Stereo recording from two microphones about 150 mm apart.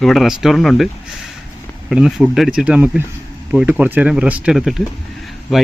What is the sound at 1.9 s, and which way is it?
Speech, 5° right (ahead or behind).